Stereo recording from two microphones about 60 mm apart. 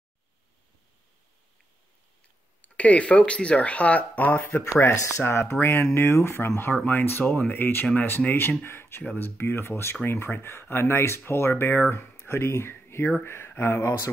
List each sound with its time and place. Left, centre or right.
2.6 s speech: left
4.6 s speech: left
9.4 s speech: left